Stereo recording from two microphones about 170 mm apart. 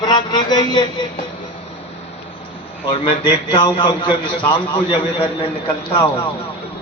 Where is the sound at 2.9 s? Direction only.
30° left (ahead or behind).